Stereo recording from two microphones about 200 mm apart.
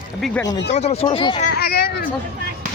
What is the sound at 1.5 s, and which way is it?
Speech, 50° left (ahead or behind).